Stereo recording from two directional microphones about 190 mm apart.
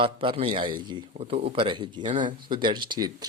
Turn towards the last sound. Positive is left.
turn(degrees=-20)  # may be behind; listen again after turning